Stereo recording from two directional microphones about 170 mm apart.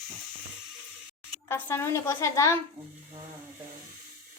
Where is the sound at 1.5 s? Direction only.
15° left (ahead or behind).